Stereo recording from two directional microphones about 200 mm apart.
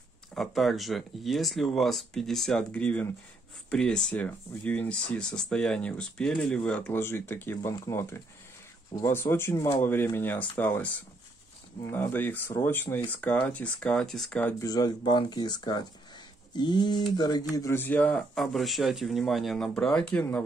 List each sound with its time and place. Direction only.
0.3 s speech: centre (ahead or behind)
14.6 s speech: 20° left (ahead or behind)